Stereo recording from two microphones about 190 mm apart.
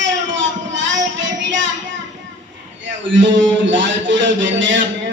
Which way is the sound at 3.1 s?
75° right (ahead or behind).